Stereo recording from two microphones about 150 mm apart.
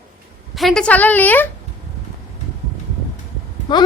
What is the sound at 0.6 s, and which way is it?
Speech, centre (ahead or behind).